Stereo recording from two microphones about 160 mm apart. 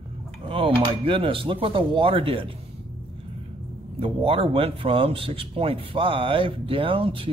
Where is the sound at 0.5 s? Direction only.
35° right (ahead or behind).